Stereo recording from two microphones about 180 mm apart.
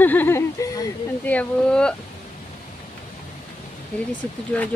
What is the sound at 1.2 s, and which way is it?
Speech, 10° left (ahead or behind).